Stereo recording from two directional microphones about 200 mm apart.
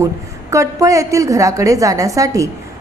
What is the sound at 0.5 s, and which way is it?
A woman's voice, 15° right (ahead or behind).